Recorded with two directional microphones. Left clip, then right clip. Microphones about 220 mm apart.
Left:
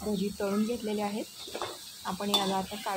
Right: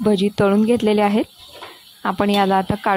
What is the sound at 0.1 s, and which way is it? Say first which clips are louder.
Speech: right 14 dB; 40° right (ahead or behind).